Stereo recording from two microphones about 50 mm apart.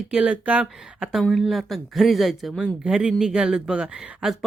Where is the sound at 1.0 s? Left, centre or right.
Centre.